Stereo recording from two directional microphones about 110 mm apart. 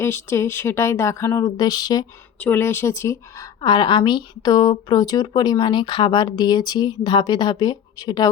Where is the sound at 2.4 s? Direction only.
20° left (ahead or behind).